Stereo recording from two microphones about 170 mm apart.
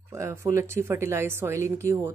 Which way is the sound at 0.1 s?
15° right (ahead or behind).